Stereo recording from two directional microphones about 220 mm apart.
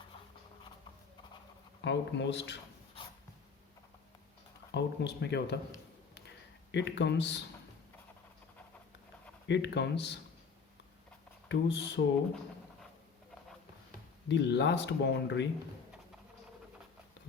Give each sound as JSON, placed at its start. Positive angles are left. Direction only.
{"t": 1.8, "sound": "speech", "side_deg": 55}
{"t": 4.7, "sound": "speech", "side_deg": 50}
{"t": 6.7, "sound": "speech", "side_deg": 55}
{"t": 9.5, "sound": "speech", "side_deg": 50}
{"t": 11.4, "sound": "speech", "side_deg": 50}
{"t": 14.3, "sound": "speech", "side_deg": 55}